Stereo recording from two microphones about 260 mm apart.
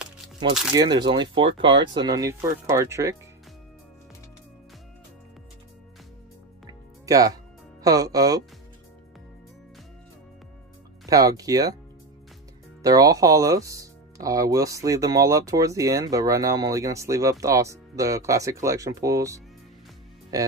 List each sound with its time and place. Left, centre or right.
0.7 s speech: centre
7.1 s speech: centre
11.1 s speech: centre
12.8 s speech: centre